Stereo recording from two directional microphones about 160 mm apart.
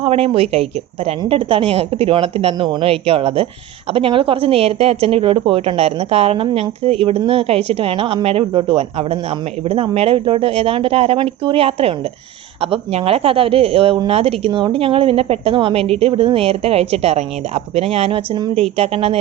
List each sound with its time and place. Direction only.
0.0 s speech: 40° right (ahead or behind)